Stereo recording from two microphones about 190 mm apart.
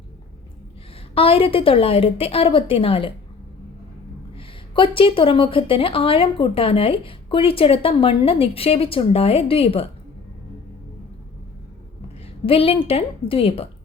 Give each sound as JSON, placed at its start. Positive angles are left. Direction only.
{"t": 1.1, "sound": "speech", "side_deg": 30}
{"t": 4.4, "sound": "speech", "side_deg": 25}
{"t": 12.5, "sound": "speech", "side_deg": 30}